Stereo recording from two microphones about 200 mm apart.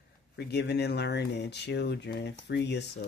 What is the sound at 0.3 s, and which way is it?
Speech, 55° left (ahead or behind).